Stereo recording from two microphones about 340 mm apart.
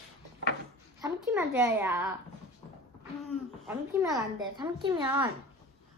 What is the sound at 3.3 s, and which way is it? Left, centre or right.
A woman's voice, centre.